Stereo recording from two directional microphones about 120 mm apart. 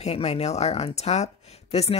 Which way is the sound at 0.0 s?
60° left (ahead or behind).